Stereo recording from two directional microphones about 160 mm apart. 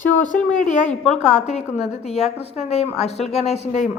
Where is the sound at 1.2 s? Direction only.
45° left (ahead or behind).